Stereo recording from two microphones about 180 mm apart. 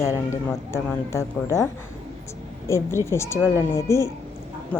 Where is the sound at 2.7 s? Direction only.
15° left (ahead or behind).